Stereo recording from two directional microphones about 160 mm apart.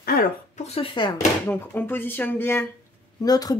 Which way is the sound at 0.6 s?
40° left (ahead or behind).